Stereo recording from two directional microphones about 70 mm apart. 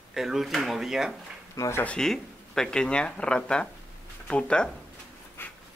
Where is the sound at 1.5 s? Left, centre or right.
Left.